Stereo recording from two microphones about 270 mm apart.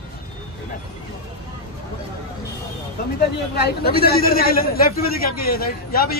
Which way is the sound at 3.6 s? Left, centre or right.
Left.